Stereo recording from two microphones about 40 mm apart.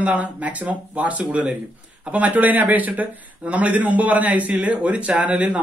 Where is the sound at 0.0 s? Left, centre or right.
Right.